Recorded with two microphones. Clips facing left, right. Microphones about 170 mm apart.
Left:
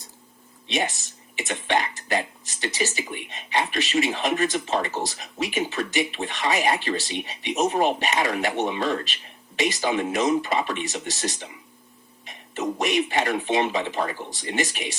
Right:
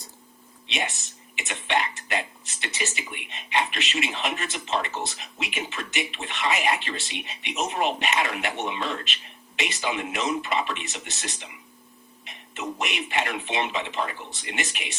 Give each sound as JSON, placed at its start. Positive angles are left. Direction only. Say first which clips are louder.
{"t": 0.7, "sound": "speech", "louder": "left 5 dB", "side_deg": 40}